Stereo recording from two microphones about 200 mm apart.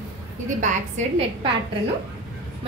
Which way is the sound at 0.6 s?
35° right (ahead or behind).